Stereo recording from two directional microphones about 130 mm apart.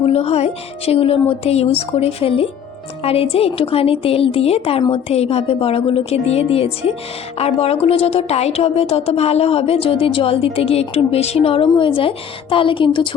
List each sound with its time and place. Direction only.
0.0 s a woman's voice: 50° left (ahead or behind)